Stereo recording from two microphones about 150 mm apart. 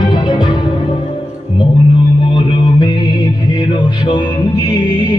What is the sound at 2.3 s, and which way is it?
Music, 30° left (ahead or behind).